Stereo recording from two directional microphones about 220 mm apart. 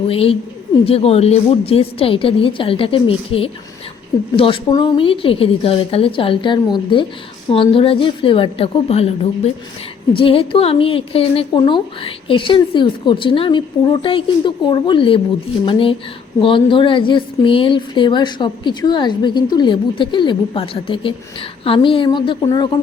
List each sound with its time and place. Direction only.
0.1 s a woman's voice: 25° left (ahead or behind)